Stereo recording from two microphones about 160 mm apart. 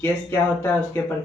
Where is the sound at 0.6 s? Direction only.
15° left (ahead or behind).